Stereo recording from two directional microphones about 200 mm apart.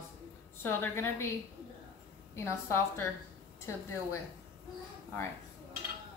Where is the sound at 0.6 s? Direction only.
10° left (ahead or behind).